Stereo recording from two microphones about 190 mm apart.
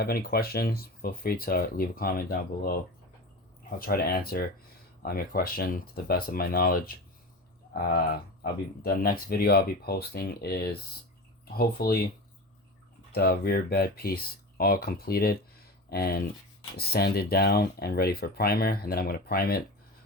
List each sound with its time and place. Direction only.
0.0 s speech: 50° left (ahead or behind)
3.8 s speech: 50° left (ahead or behind)
13.1 s speech: 55° left (ahead or behind)